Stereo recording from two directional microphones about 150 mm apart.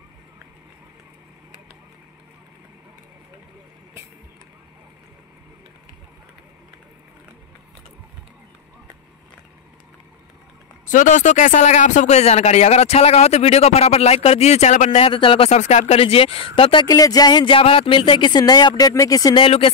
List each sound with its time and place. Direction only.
10.9 s speech: 60° left (ahead or behind); by 15.6 s 40° left (ahead or behind)
15.6 s speech: 50° left (ahead or behind)
16.8 s speech: 25° left (ahead or behind)
19.4 s speech: 40° left (ahead or behind)